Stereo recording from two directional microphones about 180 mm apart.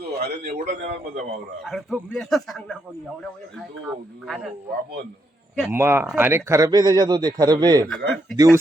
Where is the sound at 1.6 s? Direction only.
Centre (ahead or behind).